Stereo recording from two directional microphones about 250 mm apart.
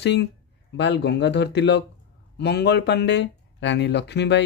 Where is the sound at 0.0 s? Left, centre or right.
Left.